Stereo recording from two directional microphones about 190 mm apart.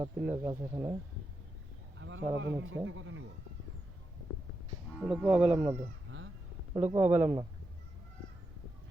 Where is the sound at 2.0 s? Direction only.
80° right.